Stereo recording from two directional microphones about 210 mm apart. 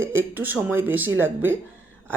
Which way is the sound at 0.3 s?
10° right (ahead or behind).